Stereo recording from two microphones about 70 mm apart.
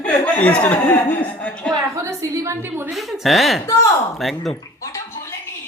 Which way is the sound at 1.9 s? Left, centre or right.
Right.